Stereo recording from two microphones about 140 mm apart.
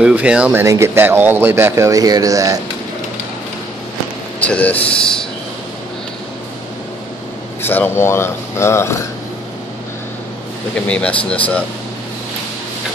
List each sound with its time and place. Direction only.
0.0 s speech: 5° right (ahead or behind); by 2.6 s 25° right (ahead or behind)
4.4 s speech: 10° left (ahead or behind)
7.6 s speech: 15° left (ahead or behind)
10.9 s speech: 10° left (ahead or behind)